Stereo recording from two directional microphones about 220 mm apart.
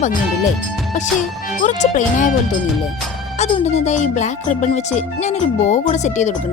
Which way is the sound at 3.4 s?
30° left (ahead or behind).